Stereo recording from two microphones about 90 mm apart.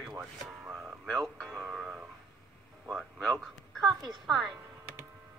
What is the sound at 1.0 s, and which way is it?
Speech, 5° left (ahead or behind).